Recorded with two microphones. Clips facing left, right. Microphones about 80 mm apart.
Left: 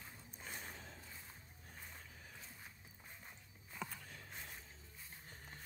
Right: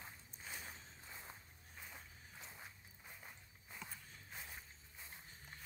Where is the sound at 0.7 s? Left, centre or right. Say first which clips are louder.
Left 3 dB; left.